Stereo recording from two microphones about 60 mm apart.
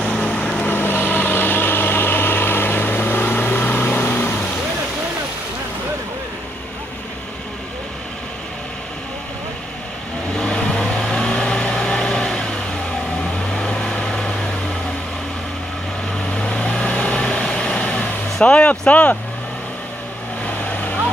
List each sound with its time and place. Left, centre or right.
0.0 s vehicle: centre
0.6 s vehicle: left
10.3 s vehicle: centre
13.6 s vehicle: centre
16.3 s vehicle: centre